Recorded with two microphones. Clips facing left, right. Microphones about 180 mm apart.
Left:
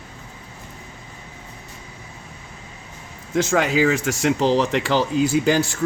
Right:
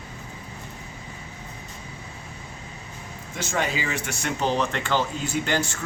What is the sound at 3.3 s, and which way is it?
Speech, 90° left.